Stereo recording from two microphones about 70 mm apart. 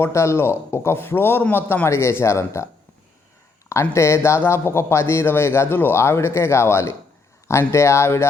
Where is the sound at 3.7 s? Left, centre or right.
Left.